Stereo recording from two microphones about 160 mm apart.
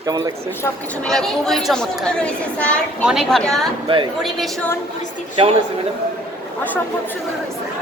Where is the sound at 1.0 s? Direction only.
5° left (ahead or behind).